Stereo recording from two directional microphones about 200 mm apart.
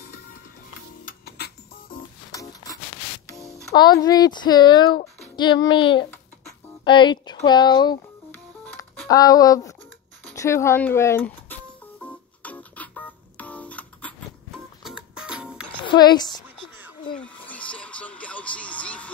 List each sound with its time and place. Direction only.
1.0 s music: 50° left (ahead or behind)
2.3 s a sound: 15° left (ahead or behind)
3.7 s a woman's voice: 20° left (ahead or behind)
6.0 s a sound: 20° left (ahead or behind)
7.4 s a woman's voice: 20° left (ahead or behind)
9.1 s speech: 20° left (ahead or behind)
12.0 s music: 5° left (ahead or behind)
15.8 s speech: 20° left (ahead or behind)
17.2 s a sound: 5° left (ahead or behind)